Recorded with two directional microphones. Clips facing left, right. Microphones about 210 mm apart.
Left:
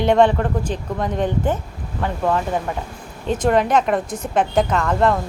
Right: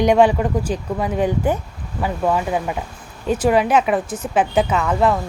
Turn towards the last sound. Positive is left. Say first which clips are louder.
# even
turn(degrees=-5)  # may be behind; listen again after turning